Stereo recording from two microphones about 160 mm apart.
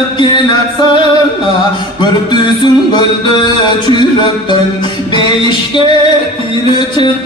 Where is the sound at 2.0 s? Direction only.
30° left (ahead or behind).